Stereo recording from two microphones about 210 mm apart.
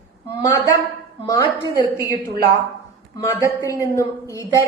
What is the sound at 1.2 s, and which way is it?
Speech, 15° left (ahead or behind).